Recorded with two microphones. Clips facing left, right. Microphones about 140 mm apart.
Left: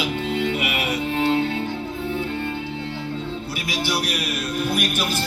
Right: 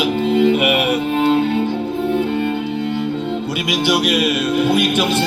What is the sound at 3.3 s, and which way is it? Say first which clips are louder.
Music: right 8 dB; 90° right.